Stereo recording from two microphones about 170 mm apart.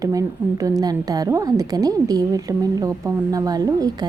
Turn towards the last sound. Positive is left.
turn(degrees=-20)  # may be behind; listen again after turning